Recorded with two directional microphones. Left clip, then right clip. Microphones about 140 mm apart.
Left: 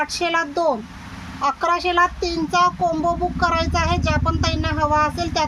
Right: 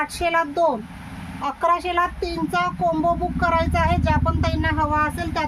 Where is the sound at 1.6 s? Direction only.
20° right (ahead or behind).